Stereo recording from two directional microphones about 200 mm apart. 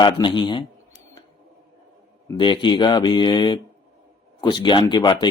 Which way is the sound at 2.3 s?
25° left (ahead or behind).